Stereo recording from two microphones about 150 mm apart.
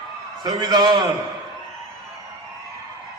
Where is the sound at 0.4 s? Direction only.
30° right (ahead or behind).